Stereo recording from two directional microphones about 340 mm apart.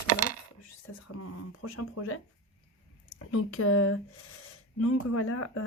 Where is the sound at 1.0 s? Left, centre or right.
Left.